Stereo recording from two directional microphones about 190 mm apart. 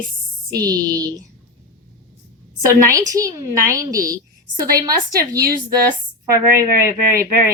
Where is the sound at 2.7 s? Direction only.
15° right (ahead or behind).